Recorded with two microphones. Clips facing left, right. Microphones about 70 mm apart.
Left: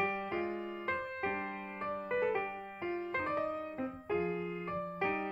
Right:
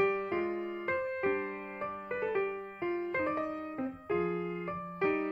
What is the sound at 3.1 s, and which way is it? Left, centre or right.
Music, centre.